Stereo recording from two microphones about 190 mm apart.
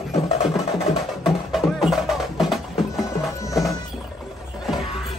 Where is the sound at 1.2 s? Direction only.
Centre (ahead or behind).